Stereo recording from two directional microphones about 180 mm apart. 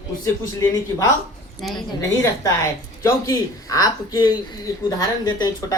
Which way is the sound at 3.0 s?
20° left (ahead or behind).